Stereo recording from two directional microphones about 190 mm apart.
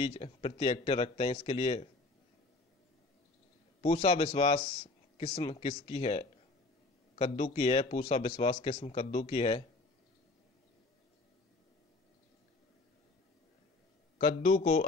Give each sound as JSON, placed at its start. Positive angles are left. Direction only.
{"t": 0.0, "sound": "speech", "side_deg": 30}
{"t": 3.8, "sound": "a man's voice", "side_deg": 30}
{"t": 14.1, "sound": "a man's voice", "side_deg": 40}